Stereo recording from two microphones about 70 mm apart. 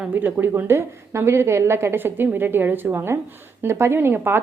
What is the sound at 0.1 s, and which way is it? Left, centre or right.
A woman's voice, right.